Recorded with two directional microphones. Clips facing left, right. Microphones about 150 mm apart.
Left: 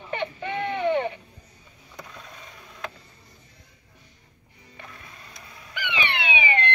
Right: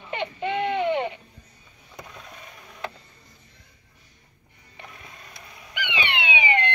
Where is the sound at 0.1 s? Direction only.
20° right (ahead or behind).